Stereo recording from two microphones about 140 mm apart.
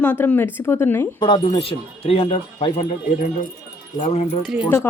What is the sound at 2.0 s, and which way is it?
Speech, 40° left (ahead or behind).